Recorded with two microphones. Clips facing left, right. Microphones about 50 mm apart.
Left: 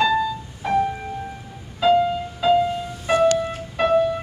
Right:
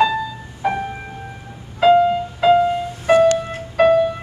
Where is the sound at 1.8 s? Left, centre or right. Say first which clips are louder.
Right 5 dB; right.